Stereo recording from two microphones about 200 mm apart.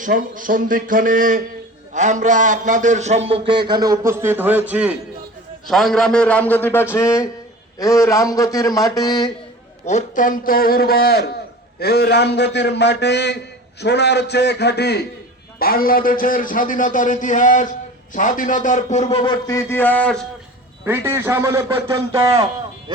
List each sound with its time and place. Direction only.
0.0 s a man's voice: 45° right (ahead or behind); by 9.3 s 20° left (ahead or behind)
9.8 s a man's voice: 40° left (ahead or behind); by 20.2 s 5° left (ahead or behind)
20.8 s a man's voice: 10° right (ahead or behind)